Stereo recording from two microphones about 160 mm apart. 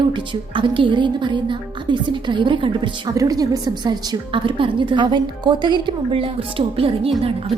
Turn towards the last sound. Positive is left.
turn(degrees=-35)  # may be behind; listen again after turning